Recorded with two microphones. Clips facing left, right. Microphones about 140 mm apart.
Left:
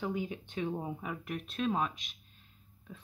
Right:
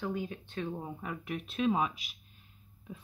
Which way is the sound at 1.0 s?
Centre (ahead or behind).